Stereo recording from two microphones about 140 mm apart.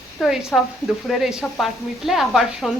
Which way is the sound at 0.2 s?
Centre (ahead or behind).